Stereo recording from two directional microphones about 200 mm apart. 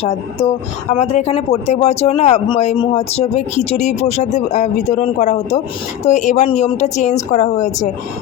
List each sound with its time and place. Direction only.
0.0 s speech: 30° left (ahead or behind)